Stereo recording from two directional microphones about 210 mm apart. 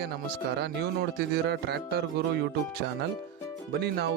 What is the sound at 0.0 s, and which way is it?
Speech, 50° right (ahead or behind).